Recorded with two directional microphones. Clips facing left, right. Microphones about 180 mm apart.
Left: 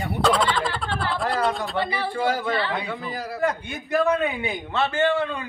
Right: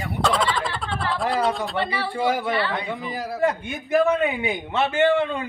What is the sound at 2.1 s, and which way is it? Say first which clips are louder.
A man's voice: right 2 dB; 15° right (ahead or behind).